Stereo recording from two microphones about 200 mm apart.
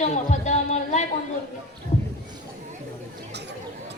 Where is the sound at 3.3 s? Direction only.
55° right (ahead or behind).